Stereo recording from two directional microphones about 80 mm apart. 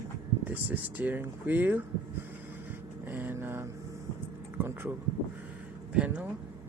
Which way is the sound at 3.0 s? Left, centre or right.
Right.